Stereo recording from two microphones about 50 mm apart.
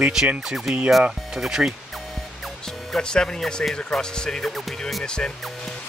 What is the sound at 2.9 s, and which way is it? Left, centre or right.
Speech, centre.